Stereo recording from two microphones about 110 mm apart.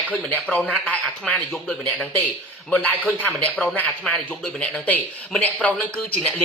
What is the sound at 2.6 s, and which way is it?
A man's voice, 10° left (ahead or behind).